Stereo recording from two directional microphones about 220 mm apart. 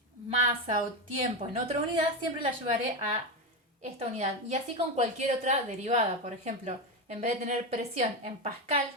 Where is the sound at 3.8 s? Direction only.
30° right (ahead or behind).